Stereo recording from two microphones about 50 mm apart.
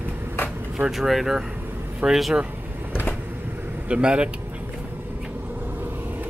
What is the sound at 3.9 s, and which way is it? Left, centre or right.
Speech, right.